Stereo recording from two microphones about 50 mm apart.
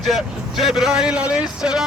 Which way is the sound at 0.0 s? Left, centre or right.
Centre.